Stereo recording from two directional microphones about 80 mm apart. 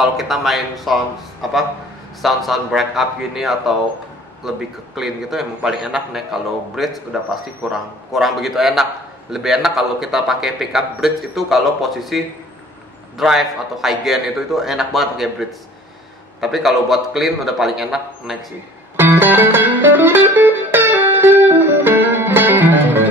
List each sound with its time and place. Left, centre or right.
0.0 s a man's voice: centre
13.2 s a man's voice: centre
18.9 s music: right